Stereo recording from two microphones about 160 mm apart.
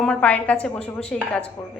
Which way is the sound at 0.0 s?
5° left (ahead or behind).